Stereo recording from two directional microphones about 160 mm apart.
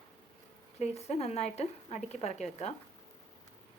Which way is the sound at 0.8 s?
40° left (ahead or behind).